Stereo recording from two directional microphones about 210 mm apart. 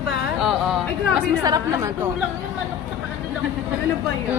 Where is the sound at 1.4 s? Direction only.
20° right (ahead or behind).